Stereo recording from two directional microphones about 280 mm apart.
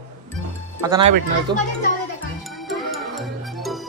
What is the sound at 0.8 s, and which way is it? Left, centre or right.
Speech, centre.